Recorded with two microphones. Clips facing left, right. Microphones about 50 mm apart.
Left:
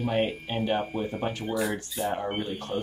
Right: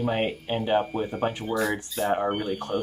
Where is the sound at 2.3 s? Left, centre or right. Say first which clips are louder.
Right 4 dB; centre.